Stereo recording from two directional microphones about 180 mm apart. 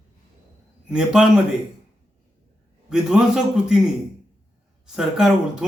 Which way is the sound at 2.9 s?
5° right (ahead or behind).